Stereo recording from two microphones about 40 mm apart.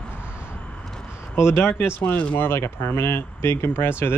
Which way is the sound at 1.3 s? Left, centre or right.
Left.